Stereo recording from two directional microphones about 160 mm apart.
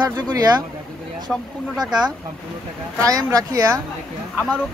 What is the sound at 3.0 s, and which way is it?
Speech, 20° right (ahead or behind).